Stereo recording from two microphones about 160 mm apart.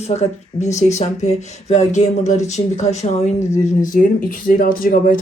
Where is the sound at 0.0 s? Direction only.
45° left (ahead or behind).